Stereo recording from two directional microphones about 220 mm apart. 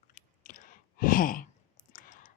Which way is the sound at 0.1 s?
35° left (ahead or behind).